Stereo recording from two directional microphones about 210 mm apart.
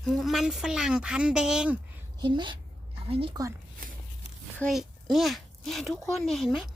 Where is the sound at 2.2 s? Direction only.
20° right (ahead or behind).